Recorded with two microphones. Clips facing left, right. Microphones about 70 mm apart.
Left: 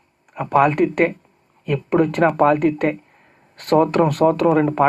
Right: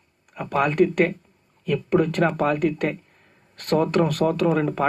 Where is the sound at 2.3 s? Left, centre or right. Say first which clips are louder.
Left 6 dB; left.